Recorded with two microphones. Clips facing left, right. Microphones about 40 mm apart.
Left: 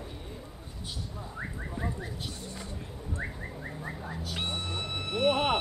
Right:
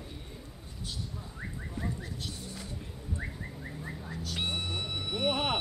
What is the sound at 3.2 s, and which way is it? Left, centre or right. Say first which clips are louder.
Bird: left 3 dB; centre.